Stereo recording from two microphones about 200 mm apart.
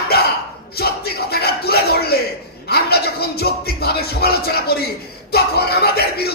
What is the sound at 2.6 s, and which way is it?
Music, 50° left (ahead or behind).